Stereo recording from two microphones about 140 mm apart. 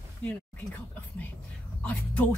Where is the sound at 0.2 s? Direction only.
10° left (ahead or behind).